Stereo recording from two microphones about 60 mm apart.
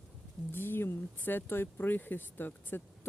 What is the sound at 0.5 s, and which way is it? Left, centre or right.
Speech, left.